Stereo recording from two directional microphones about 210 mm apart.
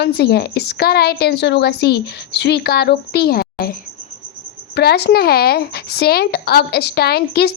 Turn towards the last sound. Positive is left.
turn(degrees=50)  # may be behind; listen again after turning